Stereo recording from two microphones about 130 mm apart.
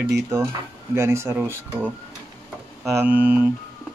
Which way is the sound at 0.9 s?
20° right (ahead or behind).